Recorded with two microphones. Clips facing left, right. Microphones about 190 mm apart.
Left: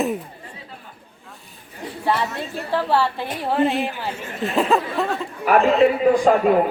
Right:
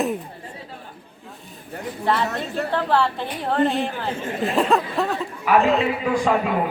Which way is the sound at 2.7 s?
5° left (ahead or behind).